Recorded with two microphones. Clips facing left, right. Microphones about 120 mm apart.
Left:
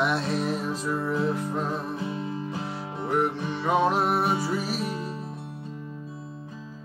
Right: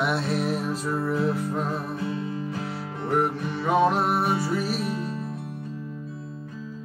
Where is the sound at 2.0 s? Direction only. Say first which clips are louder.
Right 2 dB; 20° left (ahead or behind).